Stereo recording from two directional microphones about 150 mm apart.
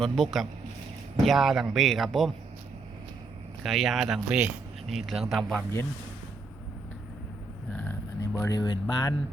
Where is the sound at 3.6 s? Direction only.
Centre (ahead or behind).